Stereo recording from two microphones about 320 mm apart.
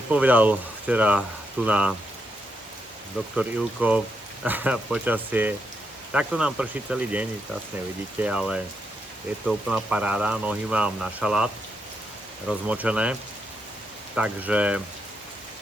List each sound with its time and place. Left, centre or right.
0.1 s speech: centre
3.3 s speech: centre
14.2 s speech: centre